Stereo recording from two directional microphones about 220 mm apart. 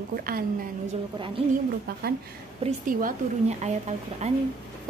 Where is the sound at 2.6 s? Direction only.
40° right (ahead or behind).